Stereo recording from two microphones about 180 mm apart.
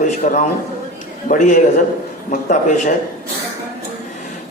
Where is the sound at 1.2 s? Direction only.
45° left (ahead or behind).